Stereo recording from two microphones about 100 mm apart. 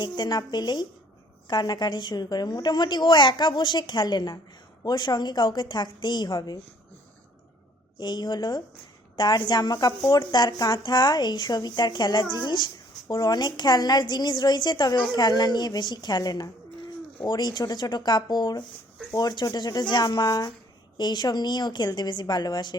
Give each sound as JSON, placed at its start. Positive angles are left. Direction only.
{"t": 0.0, "sound": "a woman's voice", "side_deg": 45}
{"t": 7.9, "sound": "a woman's voice", "side_deg": 45}